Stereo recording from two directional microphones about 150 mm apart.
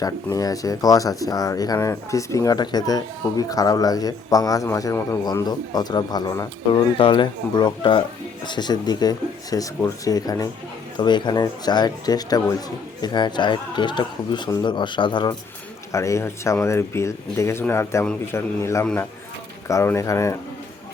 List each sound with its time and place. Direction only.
0.0 s speech: 25° left (ahead or behind)
6.7 s speech: 35° left (ahead or behind)
15.9 s speech: 20° left (ahead or behind)